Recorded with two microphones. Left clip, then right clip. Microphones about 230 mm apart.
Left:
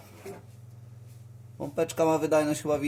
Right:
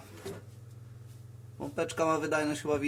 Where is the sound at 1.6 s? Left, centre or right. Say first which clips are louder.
Left 5 dB; centre.